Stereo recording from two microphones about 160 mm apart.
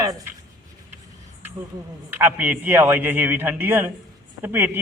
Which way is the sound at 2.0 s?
10° right (ahead or behind).